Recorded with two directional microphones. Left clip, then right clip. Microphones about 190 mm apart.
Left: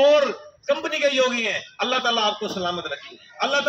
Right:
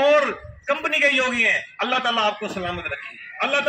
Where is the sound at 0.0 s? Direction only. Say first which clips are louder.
Left 1 dB; 30° left (ahead or behind).